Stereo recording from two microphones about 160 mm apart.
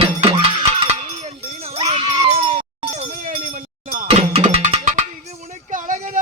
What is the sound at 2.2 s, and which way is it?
Sheep, 35° right (ahead or behind).